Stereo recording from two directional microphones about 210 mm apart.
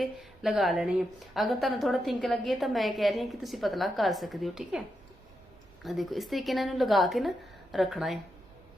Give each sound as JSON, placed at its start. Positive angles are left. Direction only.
{"t": 0.0, "sound": "a woman's voice", "side_deg": 0}
{"t": 5.8, "sound": "a woman's voice", "side_deg": 0}